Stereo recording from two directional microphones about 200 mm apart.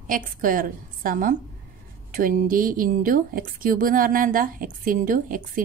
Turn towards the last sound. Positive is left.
turn(degrees=-45)  # may be behind; listen again after turning